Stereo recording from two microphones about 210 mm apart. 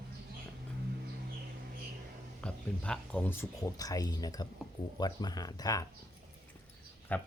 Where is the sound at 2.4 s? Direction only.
5° left (ahead or behind).